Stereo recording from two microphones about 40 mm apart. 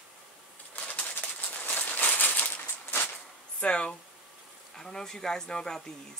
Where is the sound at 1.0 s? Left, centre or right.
Left.